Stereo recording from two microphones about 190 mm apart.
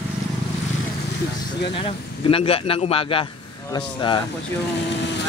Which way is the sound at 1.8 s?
30° left (ahead or behind).